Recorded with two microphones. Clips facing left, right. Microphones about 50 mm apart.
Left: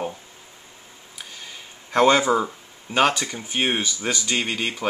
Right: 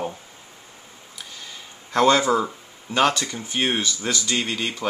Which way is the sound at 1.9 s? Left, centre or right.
Centre.